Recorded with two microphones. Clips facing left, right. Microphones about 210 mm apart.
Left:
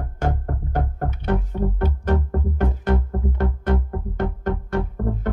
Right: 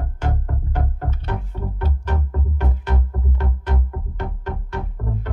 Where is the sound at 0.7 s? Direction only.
50° left (ahead or behind).